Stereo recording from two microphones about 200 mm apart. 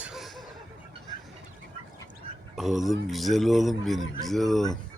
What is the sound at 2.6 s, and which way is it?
A man's voice, centre (ahead or behind).